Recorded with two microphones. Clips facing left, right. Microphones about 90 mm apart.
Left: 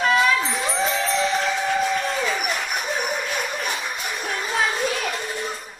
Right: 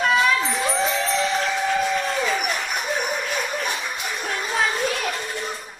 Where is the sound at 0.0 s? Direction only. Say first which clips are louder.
Even; centre (ahead or behind).